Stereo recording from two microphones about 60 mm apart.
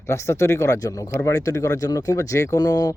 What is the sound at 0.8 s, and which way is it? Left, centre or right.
Speech, left.